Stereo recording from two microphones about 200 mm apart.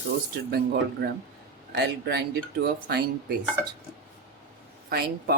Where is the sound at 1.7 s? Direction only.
55° right (ahead or behind).